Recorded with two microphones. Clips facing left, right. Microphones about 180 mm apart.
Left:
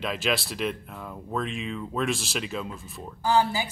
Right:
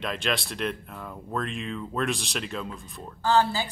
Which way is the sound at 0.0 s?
Centre (ahead or behind).